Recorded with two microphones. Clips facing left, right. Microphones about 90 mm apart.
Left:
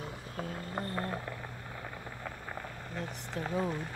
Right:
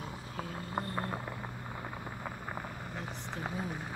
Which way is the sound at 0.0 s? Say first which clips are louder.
Left 1 dB; 10° right (ahead or behind).